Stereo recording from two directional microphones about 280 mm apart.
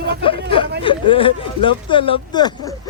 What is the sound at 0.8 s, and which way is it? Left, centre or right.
Speech, centre.